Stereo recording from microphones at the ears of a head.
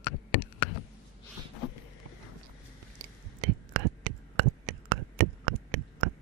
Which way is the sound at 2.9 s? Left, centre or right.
Right.